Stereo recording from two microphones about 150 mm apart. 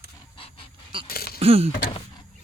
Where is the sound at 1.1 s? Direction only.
90° left.